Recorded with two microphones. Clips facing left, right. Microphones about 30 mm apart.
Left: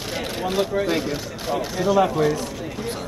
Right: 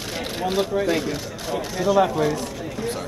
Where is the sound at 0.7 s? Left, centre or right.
Centre.